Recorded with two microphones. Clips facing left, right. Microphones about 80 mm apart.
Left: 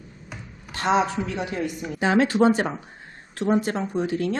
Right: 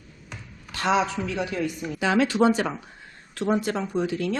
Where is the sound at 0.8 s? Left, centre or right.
Left.